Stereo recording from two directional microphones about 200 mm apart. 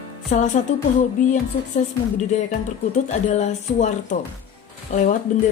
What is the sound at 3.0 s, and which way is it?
Speech, 35° left (ahead or behind).